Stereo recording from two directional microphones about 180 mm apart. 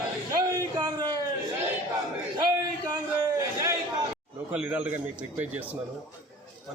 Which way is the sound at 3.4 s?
20° right (ahead or behind).